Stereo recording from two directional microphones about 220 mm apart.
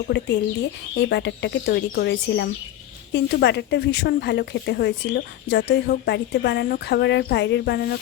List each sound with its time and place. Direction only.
0.1 s speech: 55° left (ahead or behind)